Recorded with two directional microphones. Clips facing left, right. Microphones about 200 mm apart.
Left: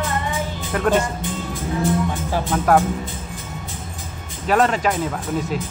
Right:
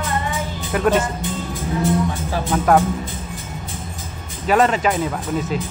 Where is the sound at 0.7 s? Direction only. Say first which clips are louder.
Right 2 dB; 5° right (ahead or behind).